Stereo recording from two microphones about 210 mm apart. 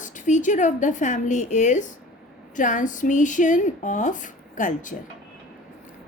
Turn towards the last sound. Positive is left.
turn(degrees=40)  # may be behind; listen again after turning